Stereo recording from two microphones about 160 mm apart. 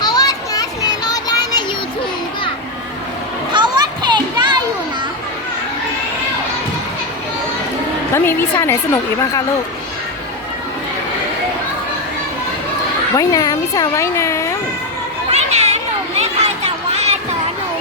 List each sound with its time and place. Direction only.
0.0 s children playing: 25° left (ahead or behind)
3.5 s children playing: 30° right (ahead or behind)
8.1 s a woman's voice: 15° left (ahead or behind)
13.1 s speech: 20° left (ahead or behind)
15.3 s chatter: 45° right (ahead or behind)